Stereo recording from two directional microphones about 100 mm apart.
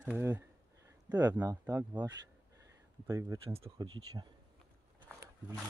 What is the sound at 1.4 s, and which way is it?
Speech, 30° right (ahead or behind).